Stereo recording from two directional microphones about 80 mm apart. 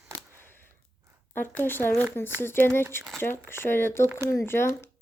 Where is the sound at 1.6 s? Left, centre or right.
Left.